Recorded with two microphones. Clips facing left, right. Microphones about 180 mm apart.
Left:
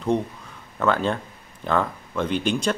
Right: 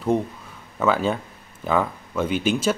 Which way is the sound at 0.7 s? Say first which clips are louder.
Right 1 dB; 5° right (ahead or behind).